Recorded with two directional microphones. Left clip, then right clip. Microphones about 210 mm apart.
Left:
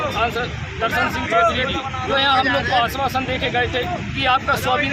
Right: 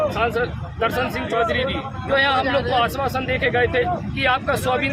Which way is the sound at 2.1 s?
25° right (ahead or behind).